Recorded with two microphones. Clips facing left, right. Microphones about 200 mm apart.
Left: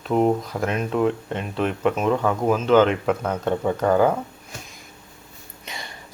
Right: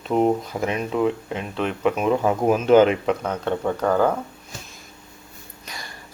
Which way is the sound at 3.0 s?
5° left (ahead or behind).